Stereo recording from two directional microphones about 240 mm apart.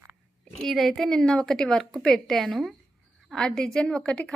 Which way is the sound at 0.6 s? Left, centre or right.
Centre.